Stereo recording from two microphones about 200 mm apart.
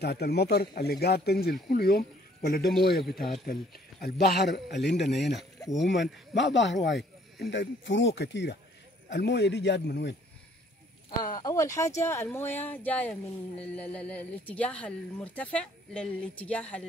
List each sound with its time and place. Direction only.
0.0 s speech: 55° left (ahead or behind)
5.1 s a woman's voice: centre (ahead or behind)
5.9 s speech: 60° left (ahead or behind)
11.1 s a woman's voice: 20° left (ahead or behind)